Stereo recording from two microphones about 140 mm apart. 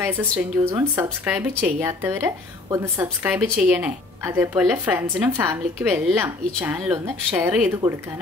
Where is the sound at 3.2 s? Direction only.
10° right (ahead or behind).